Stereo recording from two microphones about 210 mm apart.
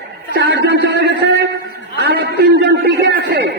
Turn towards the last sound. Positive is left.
turn(degrees=-50)  # may be behind; listen again after turning